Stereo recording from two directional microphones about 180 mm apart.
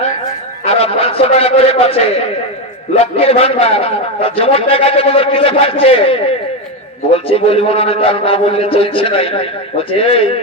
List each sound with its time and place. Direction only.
0.6 s a man's voice: 35° left (ahead or behind)
3.0 s a man's voice: 35° left (ahead or behind)